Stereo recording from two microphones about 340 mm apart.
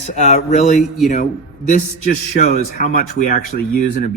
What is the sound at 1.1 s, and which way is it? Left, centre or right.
Speech, left.